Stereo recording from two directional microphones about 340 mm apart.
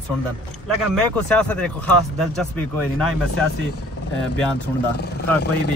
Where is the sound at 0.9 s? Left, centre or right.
Centre.